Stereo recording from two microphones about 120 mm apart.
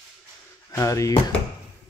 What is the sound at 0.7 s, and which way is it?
Speech, 25° left (ahead or behind).